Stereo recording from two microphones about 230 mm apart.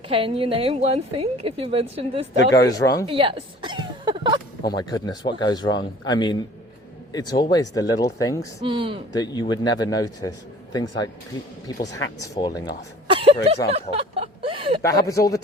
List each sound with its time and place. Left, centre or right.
0.1 s a woman's voice: right
2.5 s a man's voice: centre
3.1 s a sound: right
4.6 s a man's voice: centre
8.6 s a woman's voice: right
9.1 s a man's voice: centre
13.1 s a sound: right
14.8 s a man's voice: centre